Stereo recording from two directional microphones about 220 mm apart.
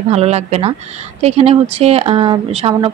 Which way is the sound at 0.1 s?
30° right (ahead or behind).